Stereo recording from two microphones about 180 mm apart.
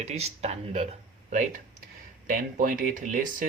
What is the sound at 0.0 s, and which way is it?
Speech, 35° right (ahead or behind).